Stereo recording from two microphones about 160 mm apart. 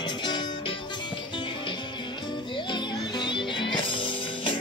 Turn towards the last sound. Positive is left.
turn(degrees=30)  # may be behind; listen again after turning